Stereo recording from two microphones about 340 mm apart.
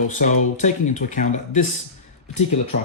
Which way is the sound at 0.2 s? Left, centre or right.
Left.